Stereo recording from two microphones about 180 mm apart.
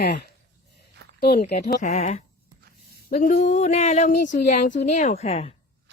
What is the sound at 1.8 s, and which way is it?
Speech, 40° left (ahead or behind).